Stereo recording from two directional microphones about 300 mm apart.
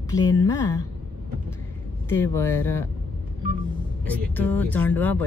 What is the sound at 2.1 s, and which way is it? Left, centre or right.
Speech, centre.